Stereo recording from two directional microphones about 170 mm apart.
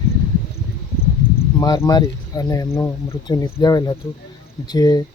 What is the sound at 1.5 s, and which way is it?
Speech, 20° left (ahead or behind).